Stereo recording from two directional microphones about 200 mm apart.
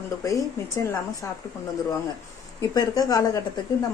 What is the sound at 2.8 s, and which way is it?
Speech, 15° left (ahead or behind).